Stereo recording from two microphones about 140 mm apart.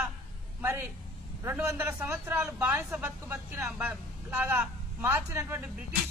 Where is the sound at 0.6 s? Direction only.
20° right (ahead or behind).